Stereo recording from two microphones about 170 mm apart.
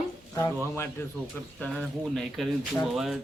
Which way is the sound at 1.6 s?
5° left (ahead or behind).